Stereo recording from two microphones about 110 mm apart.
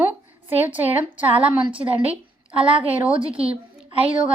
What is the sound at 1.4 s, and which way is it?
Speech, 55° right (ahead or behind).